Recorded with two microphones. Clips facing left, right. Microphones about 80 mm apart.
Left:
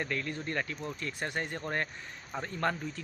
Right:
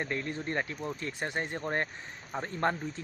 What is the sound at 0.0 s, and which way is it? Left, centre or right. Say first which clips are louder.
Speech: right 1 dB; right.